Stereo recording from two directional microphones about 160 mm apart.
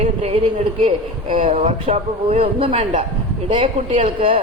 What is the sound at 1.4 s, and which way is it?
A man's voice, 45° right (ahead or behind).